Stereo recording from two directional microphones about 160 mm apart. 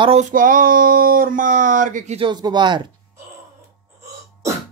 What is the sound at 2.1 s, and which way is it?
Speech, 30° right (ahead or behind).